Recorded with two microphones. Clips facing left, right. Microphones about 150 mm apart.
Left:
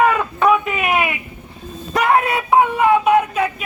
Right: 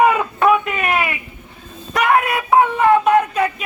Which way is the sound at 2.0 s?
30° left (ahead or behind).